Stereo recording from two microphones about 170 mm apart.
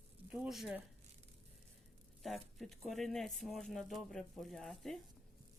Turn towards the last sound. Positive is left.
turn(degrees=0)  # may be behind; listen again after turning